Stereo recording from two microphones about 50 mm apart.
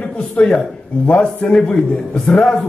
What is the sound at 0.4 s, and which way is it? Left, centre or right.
A man's voice, centre.